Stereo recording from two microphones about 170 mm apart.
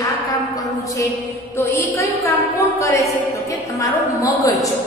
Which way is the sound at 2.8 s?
20° left (ahead or behind).